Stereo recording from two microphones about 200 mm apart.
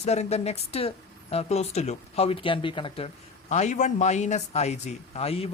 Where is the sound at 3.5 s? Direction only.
35° left (ahead or behind).